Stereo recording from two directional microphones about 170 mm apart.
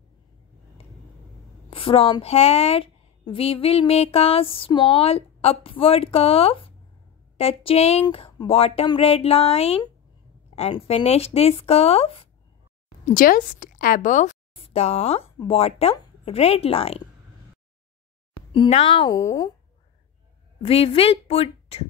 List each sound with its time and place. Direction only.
1.7 s a woman's voice: 35° left (ahead or behind)
13.1 s a woman's voice: 55° left (ahead or behind)
14.5 s speech: 35° left (ahead or behind)
18.5 s a woman's voice: 35° left (ahead or behind)
20.6 s a woman's voice: 35° left (ahead or behind)